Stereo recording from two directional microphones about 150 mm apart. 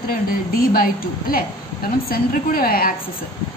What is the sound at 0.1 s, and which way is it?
A woman's voice, 75° left (ahead or behind).